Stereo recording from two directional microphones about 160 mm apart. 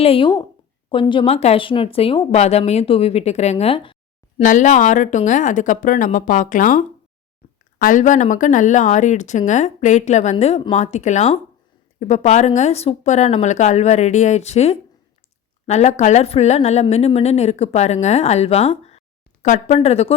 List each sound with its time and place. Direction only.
0.0 s speech: 35° left (ahead or behind)
4.4 s speech: 50° left (ahead or behind)